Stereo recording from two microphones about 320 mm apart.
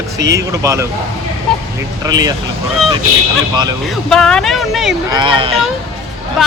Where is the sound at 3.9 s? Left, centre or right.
Centre.